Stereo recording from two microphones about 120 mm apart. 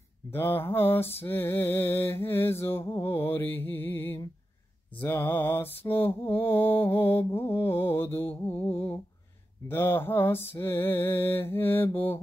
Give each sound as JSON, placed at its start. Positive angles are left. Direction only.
{"t": 0.3, "sound": "mantra", "side_deg": 20}
{"t": 5.0, "sound": "music", "side_deg": 15}
{"t": 5.9, "sound": "mantra", "side_deg": 15}
{"t": 9.7, "sound": "music", "side_deg": 20}